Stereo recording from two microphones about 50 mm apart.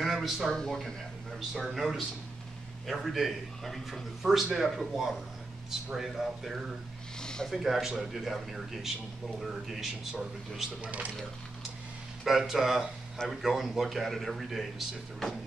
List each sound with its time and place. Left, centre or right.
0.0 s a sound: centre
0.5 s speech: centre
1.5 s a man's voice: centre
7.2 s a sound: centre
7.4 s a man's voice: centre
10.8 s speech: right
12.3 s a man's voice: centre